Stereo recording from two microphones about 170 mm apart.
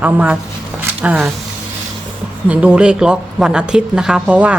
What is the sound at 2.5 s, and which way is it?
Speech, 5° right (ahead or behind).